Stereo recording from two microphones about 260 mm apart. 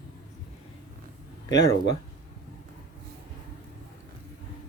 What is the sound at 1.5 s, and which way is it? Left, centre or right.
Speech, left.